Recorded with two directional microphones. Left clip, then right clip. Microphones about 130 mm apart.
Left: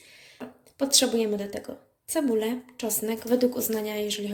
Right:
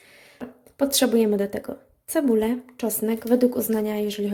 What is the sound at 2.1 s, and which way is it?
A woman's voice, 65° right (ahead or behind).